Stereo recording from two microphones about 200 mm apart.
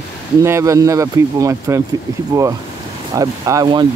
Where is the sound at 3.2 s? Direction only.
15° right (ahead or behind).